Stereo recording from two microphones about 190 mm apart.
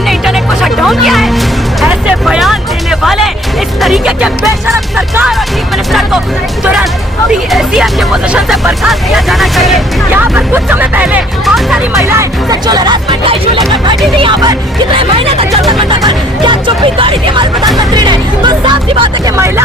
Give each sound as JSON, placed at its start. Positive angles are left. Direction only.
{"t": 0.1, "sound": "music", "side_deg": 0}
{"t": 5.3, "sound": "music", "side_deg": 0}
{"t": 7.3, "sound": "speech", "side_deg": -5}
{"t": 11.9, "sound": "speech", "side_deg": -15}